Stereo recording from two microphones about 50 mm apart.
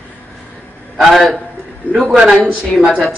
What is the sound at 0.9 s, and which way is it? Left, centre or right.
Speech, centre.